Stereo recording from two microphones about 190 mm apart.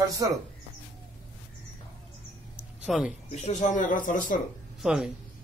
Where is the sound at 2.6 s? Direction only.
Centre (ahead or behind).